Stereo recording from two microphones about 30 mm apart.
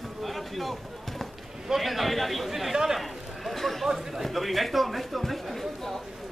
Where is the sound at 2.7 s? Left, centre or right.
Centre.